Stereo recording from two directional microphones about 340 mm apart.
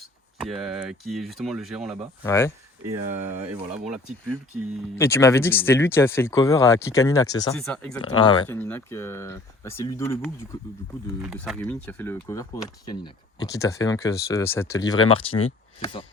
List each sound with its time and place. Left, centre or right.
0.3 s speech: centre
3.1 s speech: right
3.4 s speech: centre
8.0 s speech: centre